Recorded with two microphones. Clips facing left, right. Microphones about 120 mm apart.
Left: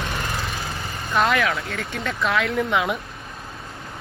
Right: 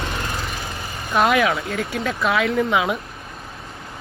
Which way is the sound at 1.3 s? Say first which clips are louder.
Right 4 dB; 20° right (ahead or behind).